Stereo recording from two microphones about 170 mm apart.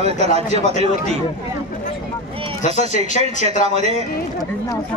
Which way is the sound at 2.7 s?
40° right (ahead or behind).